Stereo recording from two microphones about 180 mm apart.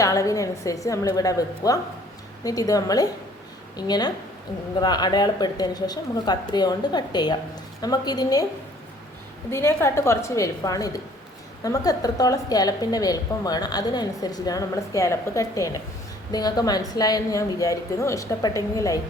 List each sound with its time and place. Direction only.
0.0 s a woman's voice: 20° left (ahead or behind)
9.5 s a woman's voice: 15° left (ahead or behind)